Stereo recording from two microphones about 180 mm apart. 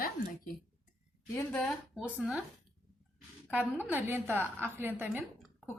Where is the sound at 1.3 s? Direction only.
5° left (ahead or behind).